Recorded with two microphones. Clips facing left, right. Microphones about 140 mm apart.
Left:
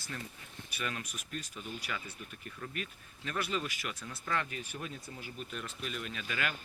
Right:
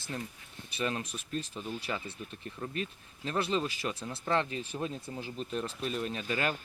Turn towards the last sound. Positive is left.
turn(degrees=-35)  # may be behind; listen again after turning